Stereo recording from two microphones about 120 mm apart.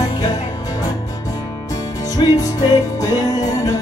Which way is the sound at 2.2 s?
45° left (ahead or behind).